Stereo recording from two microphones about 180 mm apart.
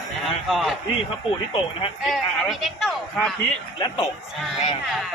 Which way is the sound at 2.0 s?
Centre (ahead or behind).